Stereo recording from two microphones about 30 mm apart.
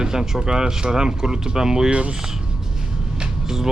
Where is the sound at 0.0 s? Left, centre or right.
Right.